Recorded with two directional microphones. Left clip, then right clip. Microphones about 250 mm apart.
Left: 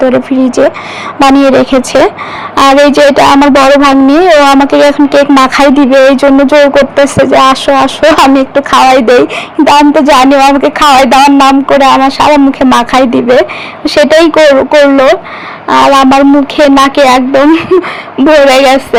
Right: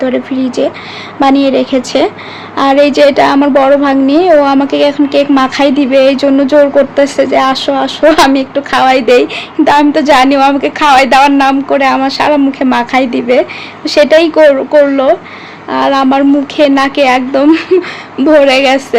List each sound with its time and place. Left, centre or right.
0.0 s speech: left